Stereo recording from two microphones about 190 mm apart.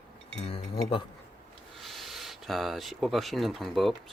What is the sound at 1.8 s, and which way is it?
Speech, centre (ahead or behind).